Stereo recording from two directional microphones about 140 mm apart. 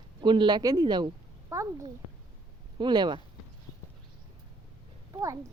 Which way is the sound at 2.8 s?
30° right (ahead or behind).